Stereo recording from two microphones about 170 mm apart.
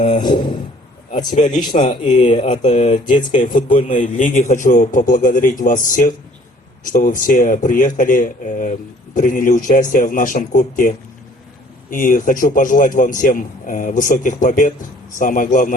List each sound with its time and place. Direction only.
0.3 s speech: 25° left (ahead or behind)
1.7 s a man's voice: 45° left (ahead or behind)
2.9 s speech: 30° left (ahead or behind)
3.3 s a man's voice: 50° left (ahead or behind)